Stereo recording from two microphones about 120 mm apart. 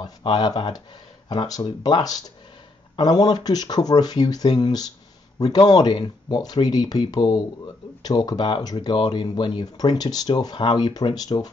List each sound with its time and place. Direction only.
0.0 s speech: 35° left (ahead or behind)